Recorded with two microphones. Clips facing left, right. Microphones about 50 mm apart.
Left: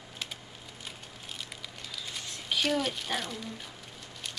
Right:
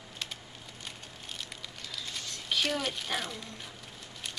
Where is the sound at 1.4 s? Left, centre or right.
Centre.